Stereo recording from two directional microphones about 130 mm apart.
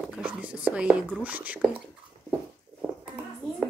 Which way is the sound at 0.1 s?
10° right (ahead or behind).